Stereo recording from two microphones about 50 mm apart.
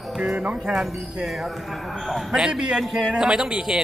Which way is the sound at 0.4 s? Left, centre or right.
Centre.